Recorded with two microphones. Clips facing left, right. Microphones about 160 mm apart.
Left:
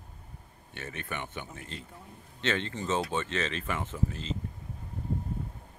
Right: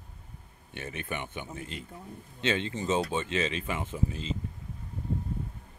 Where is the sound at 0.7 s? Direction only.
15° right (ahead or behind).